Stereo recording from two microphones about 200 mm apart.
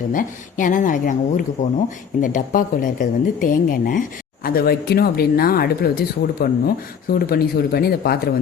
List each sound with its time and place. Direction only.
0.1 s speech: 40° left (ahead or behind)